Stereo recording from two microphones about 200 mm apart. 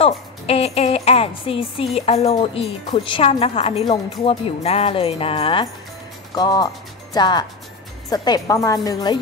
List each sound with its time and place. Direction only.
0.0 s a woman's voice: 30° left (ahead or behind)